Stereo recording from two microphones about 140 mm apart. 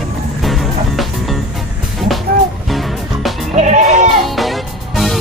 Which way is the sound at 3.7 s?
65° right (ahead or behind).